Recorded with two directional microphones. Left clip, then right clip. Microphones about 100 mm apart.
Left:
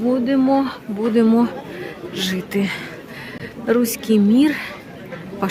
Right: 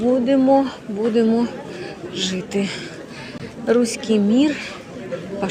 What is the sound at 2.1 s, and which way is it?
A woman's voice, 45° left (ahead or behind).